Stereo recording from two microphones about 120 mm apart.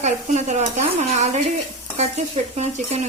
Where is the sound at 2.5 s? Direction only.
65° right (ahead or behind).